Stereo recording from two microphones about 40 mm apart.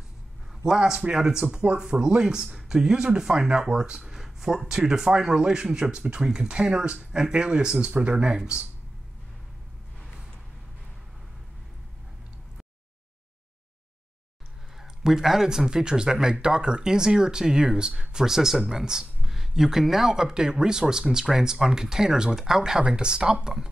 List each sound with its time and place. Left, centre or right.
0.7 s speech: centre
1.4 s speech: right
14.8 s speech: centre